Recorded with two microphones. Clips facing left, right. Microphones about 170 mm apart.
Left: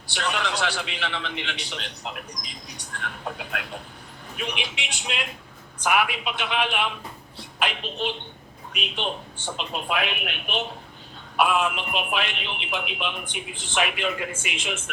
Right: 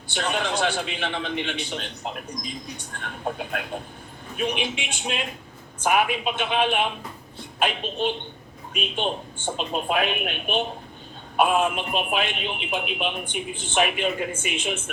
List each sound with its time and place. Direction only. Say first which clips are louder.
0.1 s a man's voice: right 2 dB; 50° right (ahead or behind)